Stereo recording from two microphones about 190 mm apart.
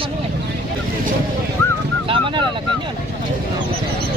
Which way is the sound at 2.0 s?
25° right (ahead or behind).